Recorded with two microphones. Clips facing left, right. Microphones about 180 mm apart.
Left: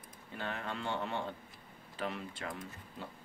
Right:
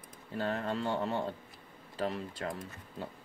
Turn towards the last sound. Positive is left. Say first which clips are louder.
# right 3 dB
turn(degrees=-40)  # may be behind; listen again after turning